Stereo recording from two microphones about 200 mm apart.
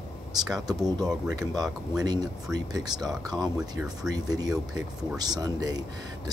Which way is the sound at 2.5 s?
20° right (ahead or behind).